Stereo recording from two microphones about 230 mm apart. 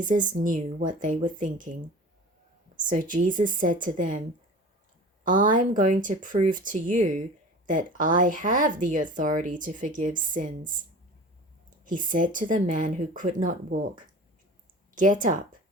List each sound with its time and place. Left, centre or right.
0.0 s speech: right
2.8 s speech: right
5.2 s speech: right
11.9 s speech: right
14.9 s speech: right